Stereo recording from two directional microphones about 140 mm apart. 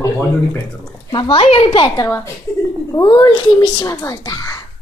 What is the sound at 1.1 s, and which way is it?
A child's voice, 35° left (ahead or behind).